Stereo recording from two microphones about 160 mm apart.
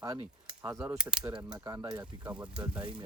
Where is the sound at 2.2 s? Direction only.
5° right (ahead or behind).